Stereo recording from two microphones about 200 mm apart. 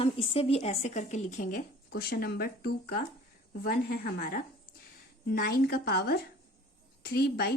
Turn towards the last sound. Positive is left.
turn(degrees=50)  # may be behind; listen again after turning